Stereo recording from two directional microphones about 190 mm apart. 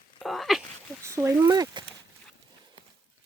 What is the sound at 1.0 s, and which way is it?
Speech, 15° right (ahead or behind).